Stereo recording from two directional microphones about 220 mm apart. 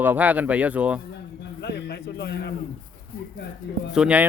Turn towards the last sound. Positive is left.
turn(degrees=-5)  # may be behind; listen again after turning